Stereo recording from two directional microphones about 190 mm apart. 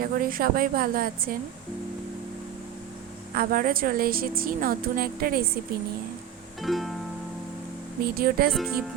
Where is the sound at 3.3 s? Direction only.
50° right (ahead or behind).